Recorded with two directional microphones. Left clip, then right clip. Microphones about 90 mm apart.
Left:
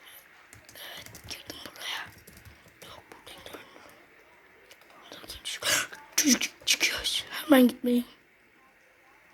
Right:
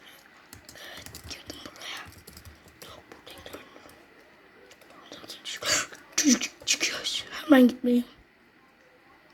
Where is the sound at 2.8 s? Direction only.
5° left (ahead or behind).